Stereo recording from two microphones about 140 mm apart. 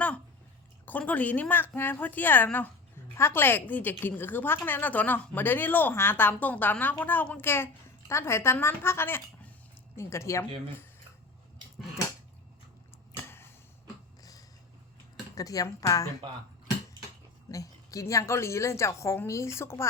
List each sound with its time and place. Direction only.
0.9 s a woman's voice: 10° left (ahead or behind)
13.2 s a sound: 15° left (ahead or behind)
15.4 s a woman's voice: 25° left (ahead or behind)
17.5 s a woman's voice: 25° left (ahead or behind)